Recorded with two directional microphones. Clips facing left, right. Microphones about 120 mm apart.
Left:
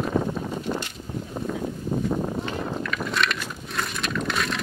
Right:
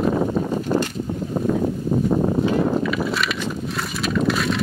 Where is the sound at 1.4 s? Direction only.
60° right (ahead or behind).